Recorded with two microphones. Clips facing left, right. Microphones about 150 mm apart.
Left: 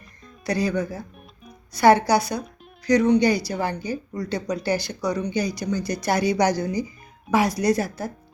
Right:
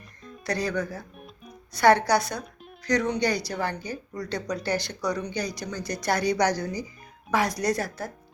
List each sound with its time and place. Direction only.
0.3 s speech: 5° left (ahead or behind)